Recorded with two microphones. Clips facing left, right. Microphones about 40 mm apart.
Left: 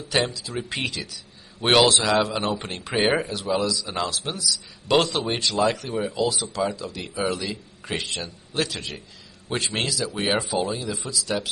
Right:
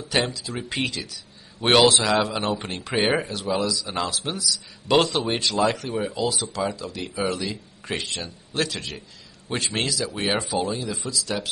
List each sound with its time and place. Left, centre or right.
0.1 s speech: centre